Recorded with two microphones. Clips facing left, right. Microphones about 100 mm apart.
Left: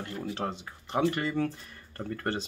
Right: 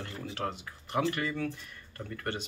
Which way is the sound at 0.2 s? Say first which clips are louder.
Left 2 dB; 25° left (ahead or behind).